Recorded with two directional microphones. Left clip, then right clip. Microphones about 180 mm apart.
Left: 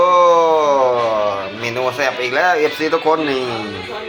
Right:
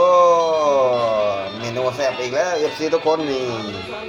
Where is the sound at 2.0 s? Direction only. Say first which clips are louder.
Left 7 dB; 25° left (ahead or behind).